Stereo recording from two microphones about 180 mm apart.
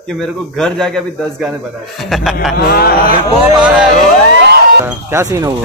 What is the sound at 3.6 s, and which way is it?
Speech, 5° right (ahead or behind).